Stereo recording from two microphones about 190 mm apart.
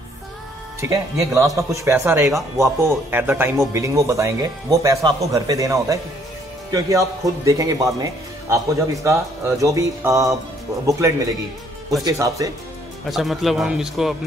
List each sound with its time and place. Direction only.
0.7 s speech: 15° right (ahead or behind)
13.1 s a man's voice: centre (ahead or behind)